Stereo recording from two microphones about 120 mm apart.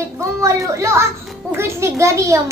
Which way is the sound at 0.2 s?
25° right (ahead or behind).